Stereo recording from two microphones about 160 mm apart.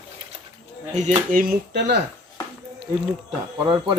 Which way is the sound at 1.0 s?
55° right (ahead or behind).